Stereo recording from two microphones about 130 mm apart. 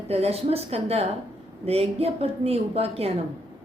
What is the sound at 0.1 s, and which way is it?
A woman's voice, 50° right (ahead or behind).